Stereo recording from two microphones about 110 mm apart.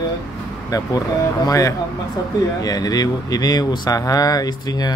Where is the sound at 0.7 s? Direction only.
35° left (ahead or behind).